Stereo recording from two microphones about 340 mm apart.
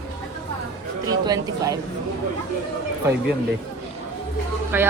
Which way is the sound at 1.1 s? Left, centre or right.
Centre.